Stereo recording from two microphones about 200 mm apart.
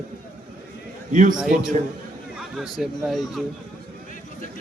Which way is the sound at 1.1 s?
40° right (ahead or behind).